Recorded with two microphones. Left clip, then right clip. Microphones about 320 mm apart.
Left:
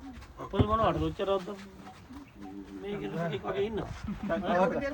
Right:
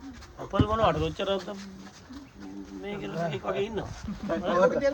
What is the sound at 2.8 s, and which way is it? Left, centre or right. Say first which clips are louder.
Speech: right 3 dB; centre.